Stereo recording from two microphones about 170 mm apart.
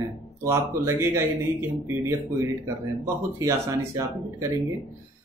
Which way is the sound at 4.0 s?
20° right (ahead or behind).